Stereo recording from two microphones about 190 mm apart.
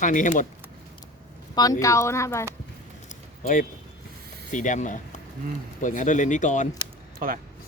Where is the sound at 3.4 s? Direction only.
45° left (ahead or behind).